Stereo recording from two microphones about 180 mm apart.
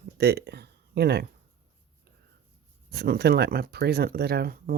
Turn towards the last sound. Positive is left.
turn(degrees=-60)  # may be behind; listen again after turning